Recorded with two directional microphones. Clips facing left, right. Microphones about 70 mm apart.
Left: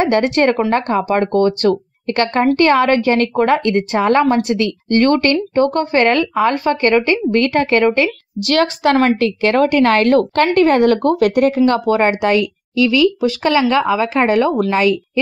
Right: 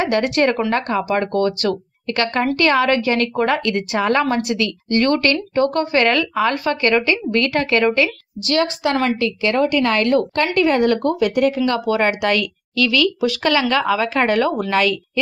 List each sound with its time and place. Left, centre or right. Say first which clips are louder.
0.0 s a woman's voice: left 3 dB; left
8.5 s a woman's voice: left 4 dB; left
11.4 s a woman's voice: left 4 dB; left
12.0 s a woman's voice: left 4 dB; left